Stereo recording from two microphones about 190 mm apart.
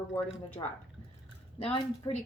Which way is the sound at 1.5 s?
30° left (ahead or behind).